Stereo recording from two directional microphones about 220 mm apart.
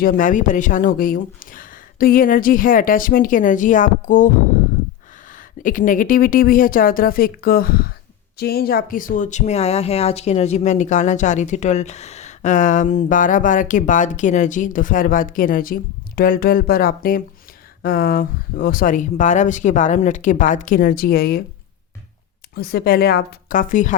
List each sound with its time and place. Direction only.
0.0 s speech: 40° left (ahead or behind)
5.3 s speech: 35° left (ahead or behind)
22.5 s a woman's voice: 45° left (ahead or behind)